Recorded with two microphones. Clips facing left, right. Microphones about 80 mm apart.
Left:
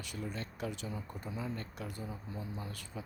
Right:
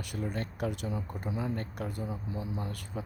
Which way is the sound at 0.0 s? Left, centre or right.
Right.